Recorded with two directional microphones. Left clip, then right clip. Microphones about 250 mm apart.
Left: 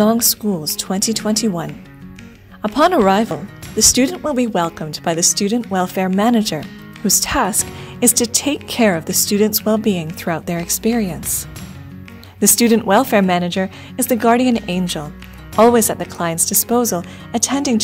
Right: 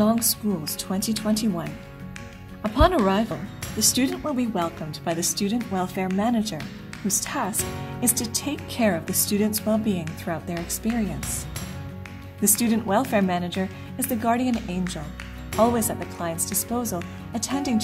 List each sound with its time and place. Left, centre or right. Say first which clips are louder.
0.0 s a woman's voice: left 8 dB; left
12.4 s a woman's voice: left 11 dB; left